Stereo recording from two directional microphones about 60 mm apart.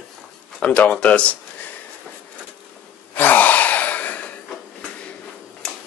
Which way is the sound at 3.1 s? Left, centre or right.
Left.